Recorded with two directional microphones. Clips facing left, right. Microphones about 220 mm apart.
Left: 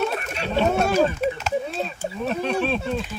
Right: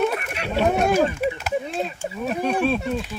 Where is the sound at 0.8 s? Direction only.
15° right (ahead or behind).